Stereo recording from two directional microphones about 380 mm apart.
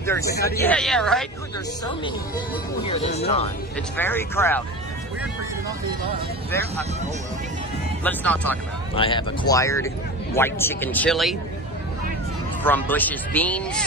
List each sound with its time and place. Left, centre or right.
0.0 s speech: centre
0.4 s speech: left
0.7 s speech: centre
2.8 s speech: centre
3.9 s speech: centre
8.0 s speech: centre
12.6 s speech: centre